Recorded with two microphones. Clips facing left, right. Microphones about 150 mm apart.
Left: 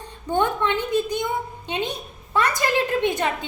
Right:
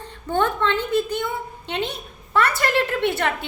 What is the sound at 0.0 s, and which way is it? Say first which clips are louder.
A woman's voice: even; 15° left (ahead or behind).